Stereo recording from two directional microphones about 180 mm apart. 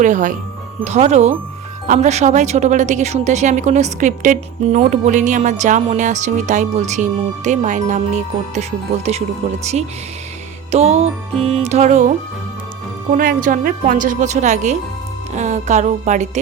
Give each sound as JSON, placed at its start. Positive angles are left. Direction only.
{"t": 0.0, "sound": "a woman's voice", "side_deg": -45}
{"t": 10.7, "sound": "a woman's voice", "side_deg": -35}
{"t": 13.1, "sound": "a woman's voice", "side_deg": -50}